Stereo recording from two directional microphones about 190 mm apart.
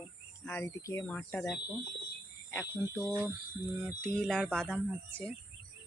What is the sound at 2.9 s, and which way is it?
Speech, 10° left (ahead or behind).